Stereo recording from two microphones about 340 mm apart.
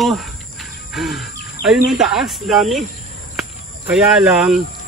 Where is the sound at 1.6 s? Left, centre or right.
Left.